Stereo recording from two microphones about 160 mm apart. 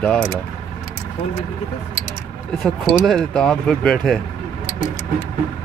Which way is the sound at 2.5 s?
Centre (ahead or behind).